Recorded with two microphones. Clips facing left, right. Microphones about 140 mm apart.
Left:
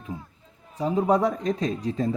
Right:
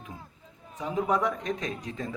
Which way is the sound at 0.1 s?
35° left (ahead or behind).